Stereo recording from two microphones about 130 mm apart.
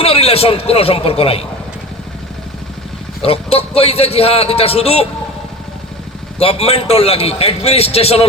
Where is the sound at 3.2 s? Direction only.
50° left (ahead or behind).